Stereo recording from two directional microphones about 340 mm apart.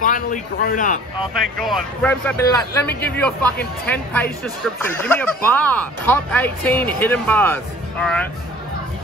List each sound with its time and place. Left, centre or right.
0.0 s speech: left
1.6 s speech: centre